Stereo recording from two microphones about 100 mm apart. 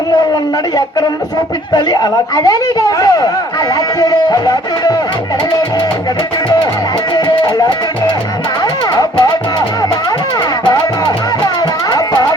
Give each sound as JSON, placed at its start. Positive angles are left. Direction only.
{"t": 1.7, "sound": "speech", "side_deg": 40}
{"t": 7.1, "sound": "music", "side_deg": 45}